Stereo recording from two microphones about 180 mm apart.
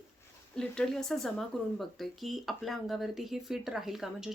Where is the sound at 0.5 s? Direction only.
5° left (ahead or behind).